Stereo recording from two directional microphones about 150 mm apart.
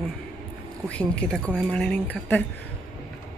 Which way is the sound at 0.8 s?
10° left (ahead or behind).